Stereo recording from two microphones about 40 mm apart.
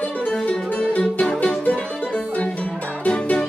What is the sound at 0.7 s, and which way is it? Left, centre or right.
Music, left.